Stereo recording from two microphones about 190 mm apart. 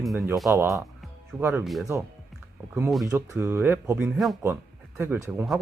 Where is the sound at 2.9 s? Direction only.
Centre (ahead or behind).